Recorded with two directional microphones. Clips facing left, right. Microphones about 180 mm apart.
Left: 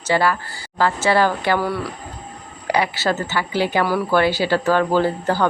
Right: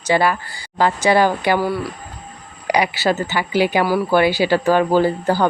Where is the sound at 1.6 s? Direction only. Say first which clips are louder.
Right 2 dB; centre (ahead or behind).